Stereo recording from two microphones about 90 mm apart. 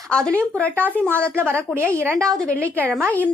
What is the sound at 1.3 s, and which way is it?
Speech, 25° right (ahead or behind).